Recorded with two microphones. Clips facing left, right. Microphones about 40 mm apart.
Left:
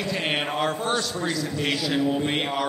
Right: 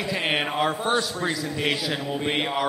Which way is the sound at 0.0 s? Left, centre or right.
Centre.